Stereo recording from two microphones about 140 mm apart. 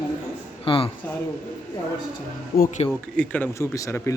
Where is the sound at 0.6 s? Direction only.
40° left (ahead or behind).